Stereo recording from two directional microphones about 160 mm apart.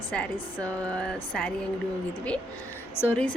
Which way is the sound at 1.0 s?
5° left (ahead or behind).